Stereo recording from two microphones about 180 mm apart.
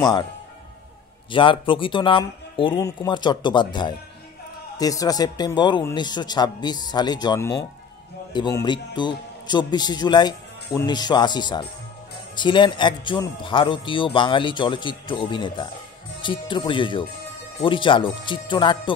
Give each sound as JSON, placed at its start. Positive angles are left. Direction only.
{"t": 0.0, "sound": "speech", "side_deg": 20}
{"t": 1.3, "sound": "speech", "side_deg": 30}